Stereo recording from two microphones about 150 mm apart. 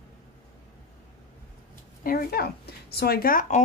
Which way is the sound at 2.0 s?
90° left.